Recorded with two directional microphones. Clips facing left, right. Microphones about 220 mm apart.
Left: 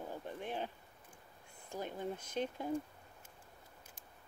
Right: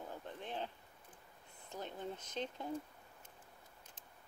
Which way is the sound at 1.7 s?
10° left (ahead or behind).